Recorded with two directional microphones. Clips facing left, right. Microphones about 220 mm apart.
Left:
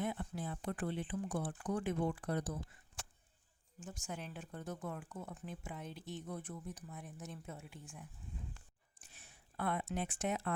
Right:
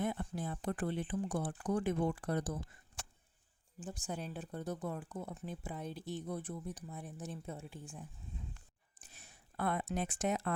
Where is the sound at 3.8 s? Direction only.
35° right (ahead or behind).